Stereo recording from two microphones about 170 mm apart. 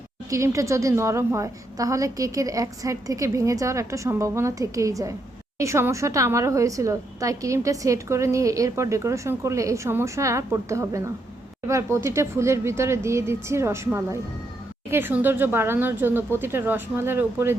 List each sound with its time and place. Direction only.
0.3 s a woman's voice: 15° right (ahead or behind)